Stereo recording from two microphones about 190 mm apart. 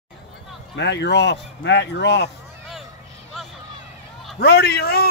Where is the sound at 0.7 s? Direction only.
65° left (ahead or behind).